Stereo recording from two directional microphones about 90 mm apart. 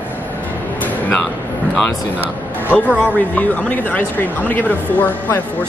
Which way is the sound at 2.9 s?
15° right (ahead or behind).